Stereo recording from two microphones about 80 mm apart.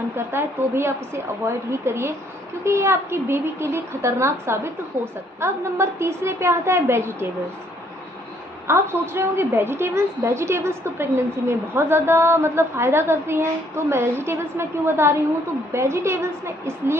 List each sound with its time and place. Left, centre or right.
0.1 s a woman's voice: right
8.6 s a woman's voice: right